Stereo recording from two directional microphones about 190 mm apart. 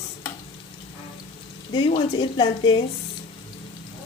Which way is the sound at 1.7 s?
25° left (ahead or behind).